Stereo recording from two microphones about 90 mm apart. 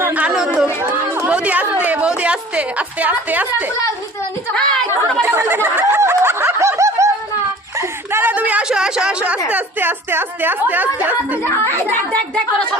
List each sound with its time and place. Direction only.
0.3 s chatter: 5° right (ahead or behind)
1.3 s a woman's voice: 15° right (ahead or behind)
4.5 s a woman's voice: 5° left (ahead or behind)
5.2 s snicker: 25° right (ahead or behind)
7.8 s a sound: 25° right (ahead or behind)
9.5 s a woman's voice: 20° right (ahead or behind)
11.4 s speech: 25° left (ahead or behind)